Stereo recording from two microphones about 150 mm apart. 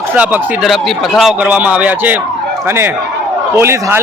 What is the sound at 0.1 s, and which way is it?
A man's voice, 5° right (ahead or behind).